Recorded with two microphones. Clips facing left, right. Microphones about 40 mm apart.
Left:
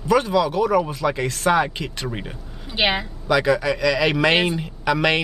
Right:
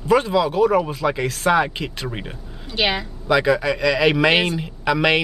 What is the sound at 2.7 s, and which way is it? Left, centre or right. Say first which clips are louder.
Speech: even; centre.